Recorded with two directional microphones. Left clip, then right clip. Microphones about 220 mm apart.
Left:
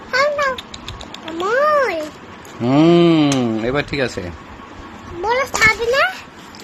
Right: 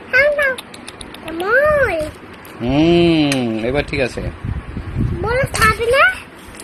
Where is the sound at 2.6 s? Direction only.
15° left (ahead or behind).